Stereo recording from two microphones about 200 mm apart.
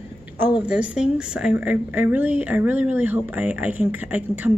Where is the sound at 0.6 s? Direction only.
5° right (ahead or behind).